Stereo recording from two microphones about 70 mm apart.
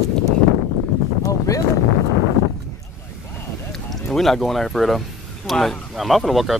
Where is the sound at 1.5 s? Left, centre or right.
Left.